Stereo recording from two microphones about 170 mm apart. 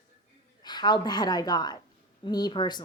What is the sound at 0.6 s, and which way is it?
Speech, 25° left (ahead or behind).